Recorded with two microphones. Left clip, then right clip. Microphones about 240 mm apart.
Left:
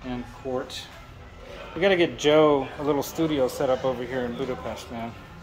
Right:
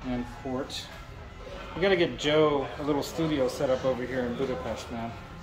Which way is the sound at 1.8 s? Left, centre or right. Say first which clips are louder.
Left 4 dB; centre.